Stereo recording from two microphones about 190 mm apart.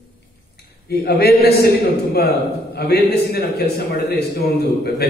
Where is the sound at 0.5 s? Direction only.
55° left (ahead or behind).